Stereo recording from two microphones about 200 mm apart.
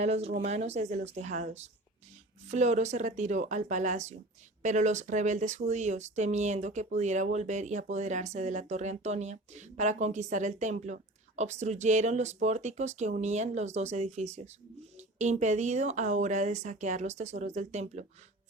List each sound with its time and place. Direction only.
0.0 s speech: 30° right (ahead or behind)